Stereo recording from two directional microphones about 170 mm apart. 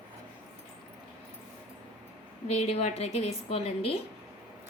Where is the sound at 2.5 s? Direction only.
40° left (ahead or behind).